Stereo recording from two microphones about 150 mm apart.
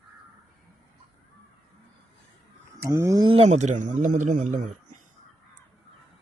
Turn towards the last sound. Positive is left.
turn(degrees=-55)  # may be behind; listen again after turning